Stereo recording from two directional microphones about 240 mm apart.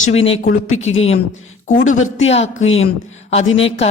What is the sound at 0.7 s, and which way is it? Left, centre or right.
Speech, left.